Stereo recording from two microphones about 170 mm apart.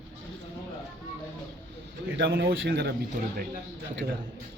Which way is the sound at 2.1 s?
75° right (ahead or behind).